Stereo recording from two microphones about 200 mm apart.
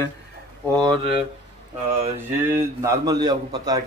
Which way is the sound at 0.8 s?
25° right (ahead or behind).